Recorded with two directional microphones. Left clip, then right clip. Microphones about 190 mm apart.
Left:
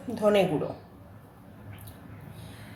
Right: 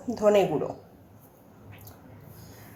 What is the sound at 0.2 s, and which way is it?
Speech, 20° right (ahead or behind).